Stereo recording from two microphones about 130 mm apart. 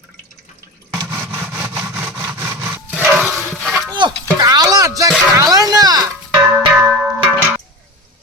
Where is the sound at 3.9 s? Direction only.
35° right (ahead or behind).